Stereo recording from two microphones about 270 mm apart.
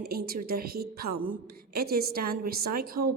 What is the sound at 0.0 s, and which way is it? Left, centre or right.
A woman's voice, right.